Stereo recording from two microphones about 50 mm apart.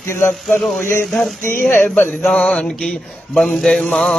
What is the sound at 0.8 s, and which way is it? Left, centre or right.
Speech, left.